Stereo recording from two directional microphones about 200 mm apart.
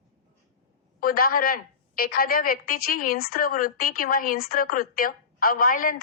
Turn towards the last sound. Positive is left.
turn(degrees=45)  # may be behind; listen again after turning